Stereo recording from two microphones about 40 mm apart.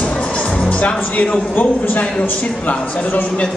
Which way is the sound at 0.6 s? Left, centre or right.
Left.